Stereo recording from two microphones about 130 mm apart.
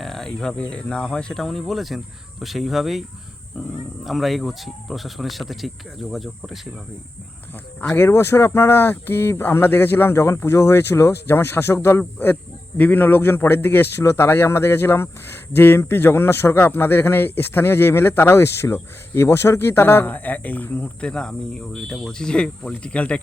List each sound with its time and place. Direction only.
0.0 s speech: 5° left (ahead or behind)
4.0 s speech: centre (ahead or behind)
7.8 s speech: 15° left (ahead or behind)